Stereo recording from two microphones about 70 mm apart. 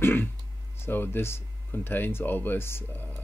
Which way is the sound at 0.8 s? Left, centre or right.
Left.